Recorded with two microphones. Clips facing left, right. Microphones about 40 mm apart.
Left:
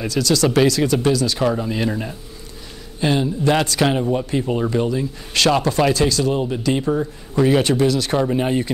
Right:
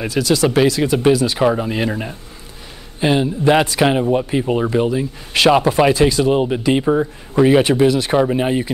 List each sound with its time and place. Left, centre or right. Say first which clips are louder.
0.0 s speech: right 2 dB; centre